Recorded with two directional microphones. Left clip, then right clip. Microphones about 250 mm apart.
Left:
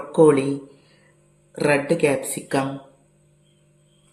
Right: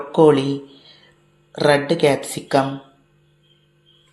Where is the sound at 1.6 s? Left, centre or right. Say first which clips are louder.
Right 3 dB; centre.